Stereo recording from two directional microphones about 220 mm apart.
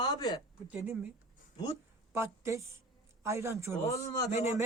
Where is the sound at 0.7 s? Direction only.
5° right (ahead or behind).